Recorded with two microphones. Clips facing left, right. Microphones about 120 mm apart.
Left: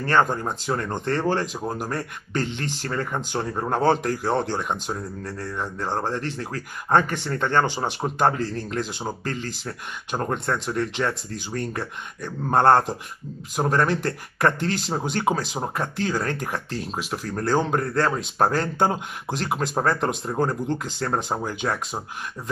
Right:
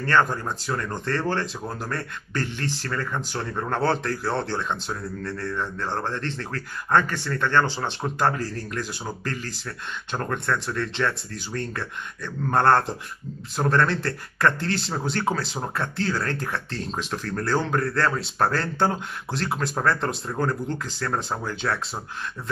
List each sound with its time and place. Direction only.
0.0 s speech: 20° left (ahead or behind)